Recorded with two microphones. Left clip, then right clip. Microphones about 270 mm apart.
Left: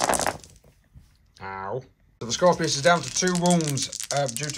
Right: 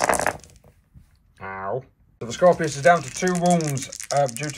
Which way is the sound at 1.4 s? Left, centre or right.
Centre.